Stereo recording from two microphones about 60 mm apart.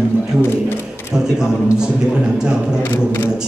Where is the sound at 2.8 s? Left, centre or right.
Left.